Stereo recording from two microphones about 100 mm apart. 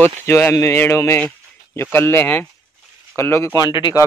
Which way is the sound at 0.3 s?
30° left (ahead or behind).